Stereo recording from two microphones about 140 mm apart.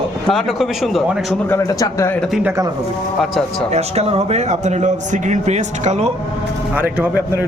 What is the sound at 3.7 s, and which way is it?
A man's voice, 50° right (ahead or behind).